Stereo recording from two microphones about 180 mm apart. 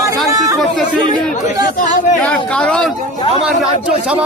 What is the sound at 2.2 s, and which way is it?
A man's voice, 5° left (ahead or behind).